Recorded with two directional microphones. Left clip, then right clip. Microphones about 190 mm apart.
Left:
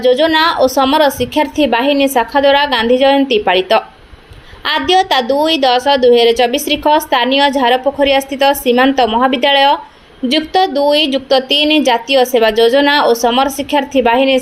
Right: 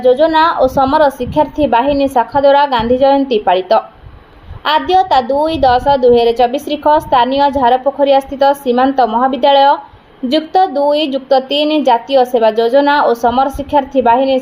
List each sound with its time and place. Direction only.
0.0 s a woman's voice: 20° left (ahead or behind)